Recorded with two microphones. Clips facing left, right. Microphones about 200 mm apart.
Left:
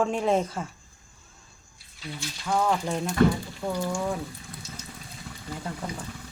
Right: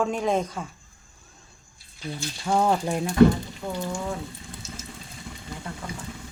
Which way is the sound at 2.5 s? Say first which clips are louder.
Right 3 dB; 25° right (ahead or behind).